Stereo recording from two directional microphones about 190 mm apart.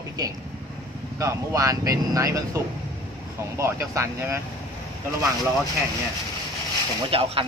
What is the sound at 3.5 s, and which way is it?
Speech, 15° right (ahead or behind).